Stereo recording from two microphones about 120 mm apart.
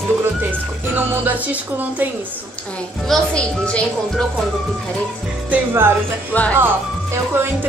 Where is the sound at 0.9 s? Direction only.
15° right (ahead or behind).